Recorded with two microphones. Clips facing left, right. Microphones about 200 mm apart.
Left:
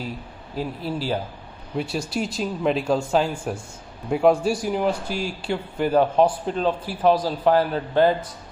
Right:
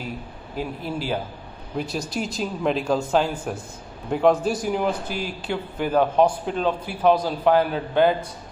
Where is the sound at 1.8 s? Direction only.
5° left (ahead or behind).